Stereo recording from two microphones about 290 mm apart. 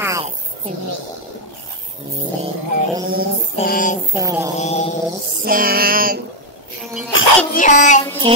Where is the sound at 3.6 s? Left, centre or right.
Left.